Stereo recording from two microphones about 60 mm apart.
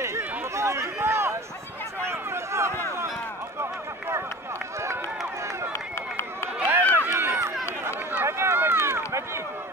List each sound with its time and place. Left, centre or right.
0.6 s a sound: right
6.8 s run: left
7.1 s run: right
7.8 s run: right